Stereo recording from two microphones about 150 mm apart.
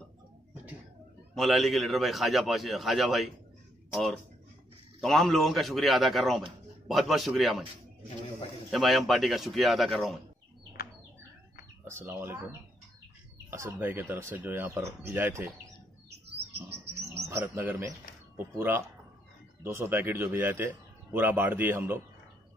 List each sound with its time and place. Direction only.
1.3 s a man's voice: centre (ahead or behind)
8.6 s a man's voice: centre (ahead or behind)
11.8 s a man's voice: 15° right (ahead or behind)
16.7 s bird: 90° right
17.3 s a man's voice: 15° right (ahead or behind)